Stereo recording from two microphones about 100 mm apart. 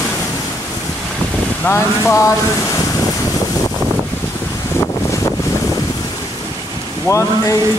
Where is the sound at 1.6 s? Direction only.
25° left (ahead or behind).